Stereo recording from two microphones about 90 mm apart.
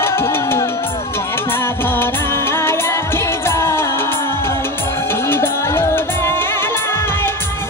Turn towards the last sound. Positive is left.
turn(degrees=25)  # may be behind; listen again after turning